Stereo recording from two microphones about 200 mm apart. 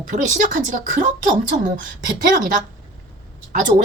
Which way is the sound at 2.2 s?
45° right (ahead or behind).